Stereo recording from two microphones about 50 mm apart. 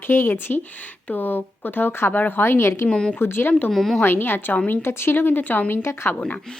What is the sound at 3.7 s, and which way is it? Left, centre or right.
Speech, centre.